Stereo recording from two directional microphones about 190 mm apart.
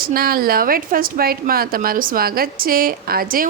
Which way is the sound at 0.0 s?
50° right (ahead or behind).